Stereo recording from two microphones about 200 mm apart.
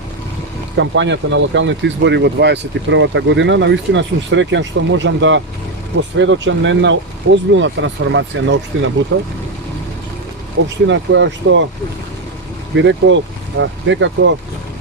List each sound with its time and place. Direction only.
0.8 s speech: 65° right (ahead or behind)
8.7 s speech: 75° right (ahead or behind)
9.1 s speech: 65° right (ahead or behind)
10.8 s speech: 65° right (ahead or behind)
12.7 s speech: 65° right (ahead or behind)